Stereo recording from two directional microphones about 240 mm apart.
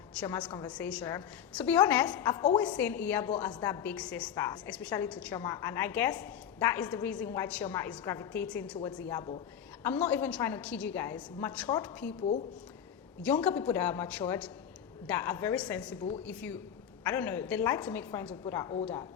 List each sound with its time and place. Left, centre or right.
0.2 s a woman's voice: centre
9.1 s a man's voice: centre
9.8 s a woman's voice: centre
13.2 s a woman's voice: centre